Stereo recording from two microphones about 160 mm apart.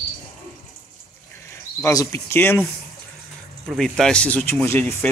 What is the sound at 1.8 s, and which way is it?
Speech, 20° left (ahead or behind).